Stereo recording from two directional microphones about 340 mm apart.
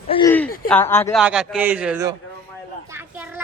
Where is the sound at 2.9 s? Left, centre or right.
Centre.